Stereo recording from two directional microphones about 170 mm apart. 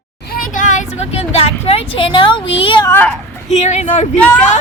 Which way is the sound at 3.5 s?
40° left (ahead or behind).